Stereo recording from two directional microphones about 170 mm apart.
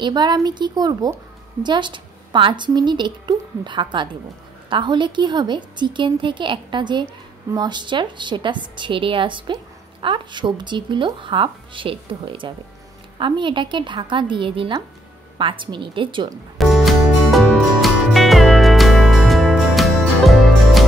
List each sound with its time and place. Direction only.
0.0 s a woman's voice: 25° right (ahead or behind)
16.5 s music: centre (ahead or behind)